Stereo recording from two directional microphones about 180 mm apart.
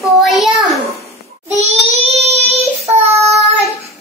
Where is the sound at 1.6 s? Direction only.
35° right (ahead or behind).